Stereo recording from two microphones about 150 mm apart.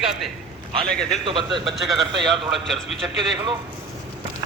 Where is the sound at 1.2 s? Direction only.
30° right (ahead or behind).